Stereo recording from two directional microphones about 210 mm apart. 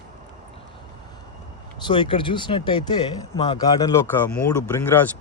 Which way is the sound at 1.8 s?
25° left (ahead or behind).